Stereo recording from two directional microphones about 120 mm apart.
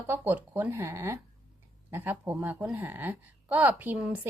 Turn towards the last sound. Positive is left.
turn(degrees=-10)  # may be behind; listen again after turning